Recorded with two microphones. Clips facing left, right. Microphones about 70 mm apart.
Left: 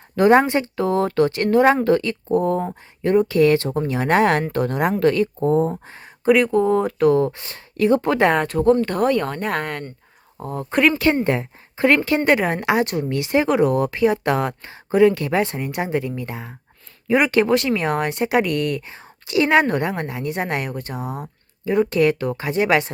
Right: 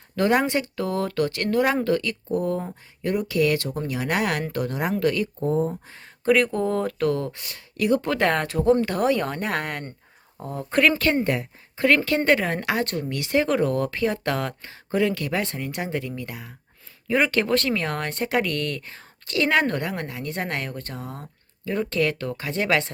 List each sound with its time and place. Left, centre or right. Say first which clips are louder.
0.2 s speech: left 6 dB; left
5.5 s speech: left 4 dB; left
5.8 s speech: left 5 dB; left
6.2 s speech: left 5 dB; centre; by 7.3 s left
7.3 s speech: left 5 dB; left
8.3 s speech: left 4 dB; centre; by 16.6 s left
17.1 s speech: left 5 dB; centre